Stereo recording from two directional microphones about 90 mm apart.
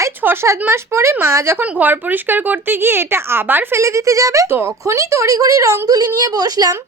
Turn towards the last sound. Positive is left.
turn(degrees=-45)  # may be behind; listen again after turning